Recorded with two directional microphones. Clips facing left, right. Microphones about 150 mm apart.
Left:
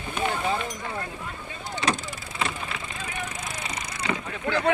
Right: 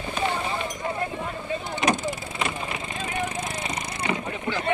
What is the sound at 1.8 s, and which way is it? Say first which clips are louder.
Vehicle: right 3 dB; 20° right (ahead or behind).